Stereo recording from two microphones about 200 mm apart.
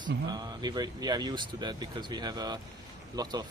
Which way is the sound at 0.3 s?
20° right (ahead or behind).